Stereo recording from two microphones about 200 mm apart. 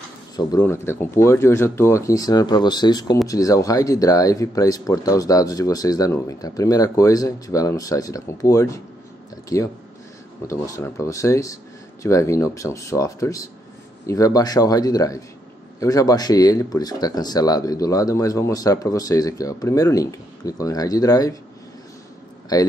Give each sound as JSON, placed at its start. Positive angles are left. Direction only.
{"t": 0.5, "sound": "speech", "side_deg": 10}
{"t": 22.5, "sound": "speech", "side_deg": 20}